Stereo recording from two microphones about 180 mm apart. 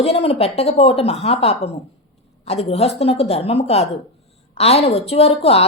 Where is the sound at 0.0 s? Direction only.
35° left (ahead or behind).